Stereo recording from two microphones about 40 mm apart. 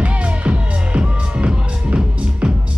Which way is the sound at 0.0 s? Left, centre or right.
Right.